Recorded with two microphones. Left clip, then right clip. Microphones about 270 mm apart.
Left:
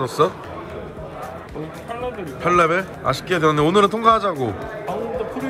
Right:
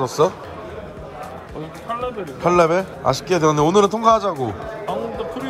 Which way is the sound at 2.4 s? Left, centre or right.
Centre.